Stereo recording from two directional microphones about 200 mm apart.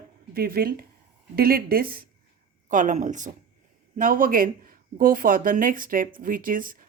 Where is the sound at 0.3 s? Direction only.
50° right (ahead or behind).